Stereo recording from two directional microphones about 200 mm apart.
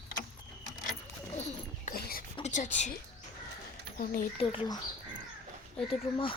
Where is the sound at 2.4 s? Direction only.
35° left (ahead or behind).